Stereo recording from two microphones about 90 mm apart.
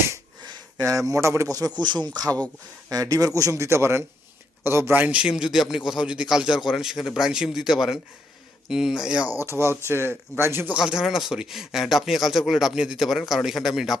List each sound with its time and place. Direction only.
0.9 s a man's voice: 35° right (ahead or behind)
1.8 s a man's voice: 55° right (ahead or behind); by 9.2 s 10° right (ahead or behind)
9.2 s speech: 40° left (ahead or behind)
9.5 s speech: 30° right (ahead or behind)
10.8 s speech: 5° right (ahead or behind)